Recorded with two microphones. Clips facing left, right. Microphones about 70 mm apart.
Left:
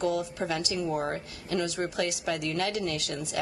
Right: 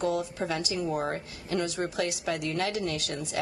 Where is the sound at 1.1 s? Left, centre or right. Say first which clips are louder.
Even; right.